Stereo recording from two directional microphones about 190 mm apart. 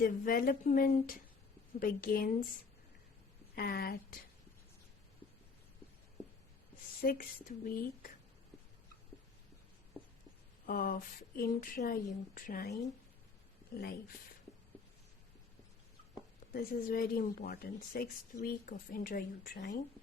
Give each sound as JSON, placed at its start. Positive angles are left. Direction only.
{"t": 0.0, "sound": "speech", "side_deg": 50}
{"t": 3.5, "sound": "speech", "side_deg": 55}
{"t": 7.0, "sound": "speech", "side_deg": 50}
{"t": 10.7, "sound": "speech", "side_deg": 50}
{"t": 13.7, "sound": "speech", "side_deg": 55}
{"t": 16.6, "sound": "speech", "side_deg": 50}